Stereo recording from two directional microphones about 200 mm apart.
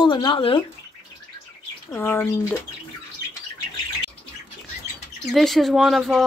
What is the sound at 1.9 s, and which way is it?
Speech, 10° left (ahead or behind).